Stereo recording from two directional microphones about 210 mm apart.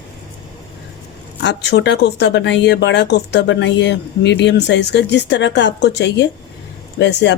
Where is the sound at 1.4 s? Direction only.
55° left (ahead or behind).